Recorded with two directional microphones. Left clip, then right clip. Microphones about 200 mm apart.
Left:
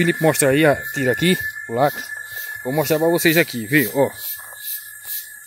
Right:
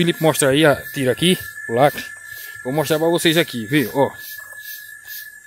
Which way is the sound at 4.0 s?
15° right (ahead or behind).